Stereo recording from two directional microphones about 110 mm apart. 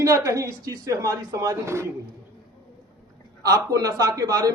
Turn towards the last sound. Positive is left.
turn(degrees=-35)  # may be behind; listen again after turning